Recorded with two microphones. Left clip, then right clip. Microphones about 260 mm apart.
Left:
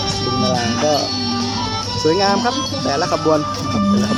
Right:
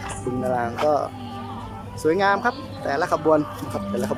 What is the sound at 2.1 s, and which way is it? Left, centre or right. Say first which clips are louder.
Speech: left 3 dB; centre.